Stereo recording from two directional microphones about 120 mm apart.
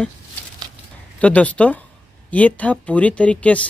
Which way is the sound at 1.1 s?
10° left (ahead or behind).